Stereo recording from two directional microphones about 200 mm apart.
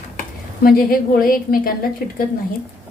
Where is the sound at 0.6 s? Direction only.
45° left (ahead or behind).